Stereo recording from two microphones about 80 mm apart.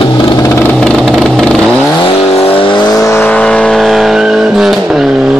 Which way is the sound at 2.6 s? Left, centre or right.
Left.